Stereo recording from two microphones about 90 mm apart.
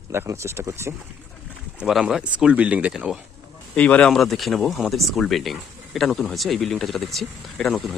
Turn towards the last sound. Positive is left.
turn(degrees=5)  # may be behind; listen again after turning